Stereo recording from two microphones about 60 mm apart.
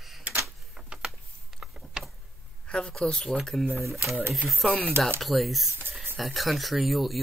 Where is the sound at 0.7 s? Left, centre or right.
Centre.